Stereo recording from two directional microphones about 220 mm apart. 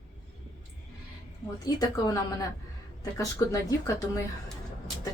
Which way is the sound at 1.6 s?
15° left (ahead or behind).